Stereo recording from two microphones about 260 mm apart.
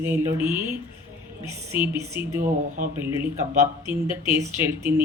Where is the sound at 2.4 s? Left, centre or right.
Right.